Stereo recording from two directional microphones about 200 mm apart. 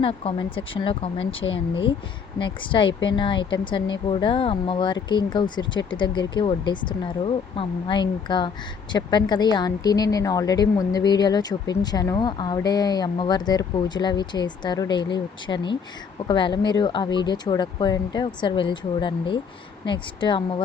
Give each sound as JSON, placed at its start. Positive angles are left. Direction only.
{"t": 0.0, "sound": "speech", "side_deg": 25}